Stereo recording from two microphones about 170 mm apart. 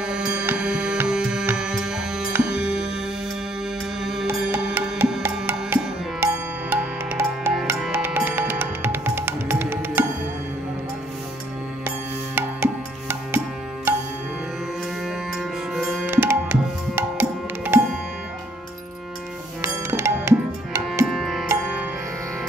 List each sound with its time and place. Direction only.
0.0 s music: 5° right (ahead or behind)
4.0 s music: 5° right (ahead or behind)
12.4 s music: 10° right (ahead or behind)
15.0 s music: centre (ahead or behind)
16.1 s tabla: 15° right (ahead or behind)
19.6 s music: 15° right (ahead or behind)
21.1 s music: centre (ahead or behind)